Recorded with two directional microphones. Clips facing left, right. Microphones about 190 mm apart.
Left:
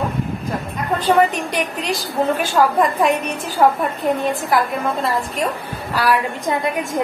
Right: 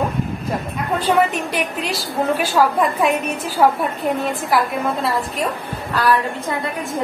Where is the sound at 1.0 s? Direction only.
5° right (ahead or behind).